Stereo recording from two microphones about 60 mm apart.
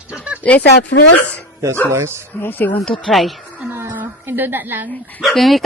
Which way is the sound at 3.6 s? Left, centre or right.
Right.